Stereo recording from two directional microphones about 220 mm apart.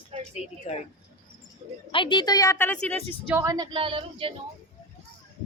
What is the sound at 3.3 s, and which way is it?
Speech, 15° right (ahead or behind).